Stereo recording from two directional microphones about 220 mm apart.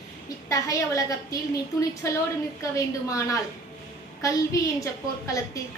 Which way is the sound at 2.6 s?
15° left (ahead or behind).